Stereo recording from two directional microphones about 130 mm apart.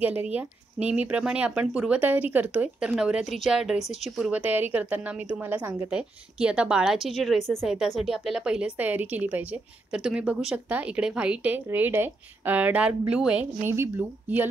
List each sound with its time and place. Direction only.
0.3 s a woman's voice: 10° right (ahead or behind)
13.7 s a woman's voice: 20° right (ahead or behind)